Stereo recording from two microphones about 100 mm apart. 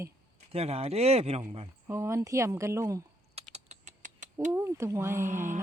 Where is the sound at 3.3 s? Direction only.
90° right.